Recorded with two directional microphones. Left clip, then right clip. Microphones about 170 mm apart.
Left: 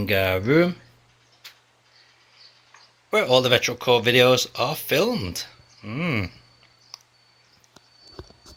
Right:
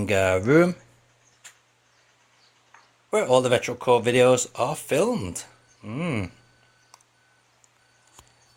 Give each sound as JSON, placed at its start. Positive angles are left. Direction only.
{"t": 0.0, "sound": "speech", "side_deg": -15}
{"t": 3.1, "sound": "speech", "side_deg": -10}